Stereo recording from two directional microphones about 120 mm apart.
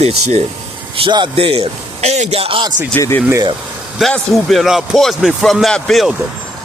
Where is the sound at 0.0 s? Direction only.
60° right (ahead or behind).